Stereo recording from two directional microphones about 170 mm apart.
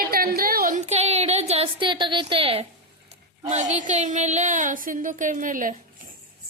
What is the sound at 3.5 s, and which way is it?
Speech, 45° right (ahead or behind).